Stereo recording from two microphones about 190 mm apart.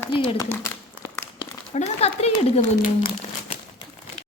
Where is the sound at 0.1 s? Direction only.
25° left (ahead or behind).